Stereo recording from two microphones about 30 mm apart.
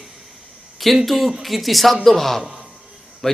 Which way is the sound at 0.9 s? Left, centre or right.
Centre.